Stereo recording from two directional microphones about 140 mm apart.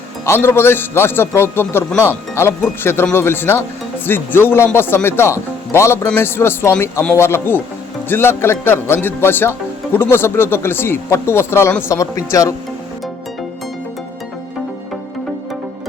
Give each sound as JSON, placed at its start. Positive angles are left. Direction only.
{"t": 0.3, "sound": "speech", "side_deg": 15}